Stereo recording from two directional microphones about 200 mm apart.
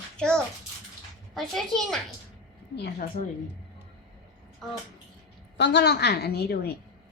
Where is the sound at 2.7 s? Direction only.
55° left (ahead or behind).